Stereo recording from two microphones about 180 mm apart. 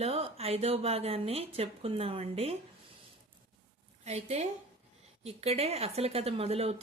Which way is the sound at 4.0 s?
35° right (ahead or behind).